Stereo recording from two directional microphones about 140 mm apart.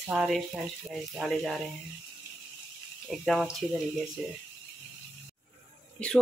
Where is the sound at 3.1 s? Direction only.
Centre (ahead or behind).